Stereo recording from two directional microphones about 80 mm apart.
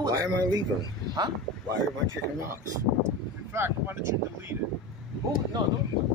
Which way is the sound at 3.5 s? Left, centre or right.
Right.